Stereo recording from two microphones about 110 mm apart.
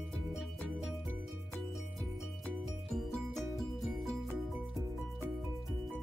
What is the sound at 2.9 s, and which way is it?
Music, centre (ahead or behind).